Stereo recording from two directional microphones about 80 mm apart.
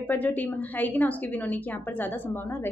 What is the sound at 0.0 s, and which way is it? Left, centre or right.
Speech, left.